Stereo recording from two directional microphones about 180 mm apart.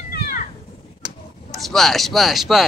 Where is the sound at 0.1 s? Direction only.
50° left (ahead or behind).